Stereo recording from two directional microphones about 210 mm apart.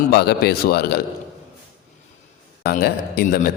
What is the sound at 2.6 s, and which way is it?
Speech, 45° left (ahead or behind).